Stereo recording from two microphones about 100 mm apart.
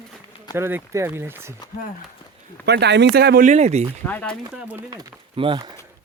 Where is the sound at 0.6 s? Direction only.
25° right (ahead or behind).